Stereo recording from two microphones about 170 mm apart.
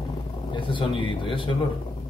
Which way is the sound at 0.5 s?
30° left (ahead or behind).